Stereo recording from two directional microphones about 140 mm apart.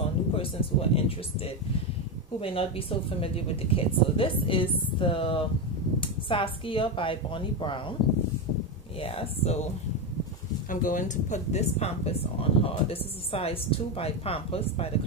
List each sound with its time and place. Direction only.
0.0 s speech: 45° left (ahead or behind)
9.0 s speech: 45° left (ahead or behind)
10.7 s speech: 70° left (ahead or behind); by 14.9 s 45° left (ahead or behind)